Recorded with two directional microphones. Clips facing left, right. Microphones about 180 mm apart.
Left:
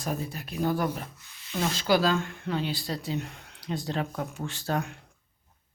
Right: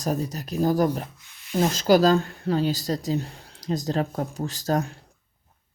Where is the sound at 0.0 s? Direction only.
40° right (ahead or behind).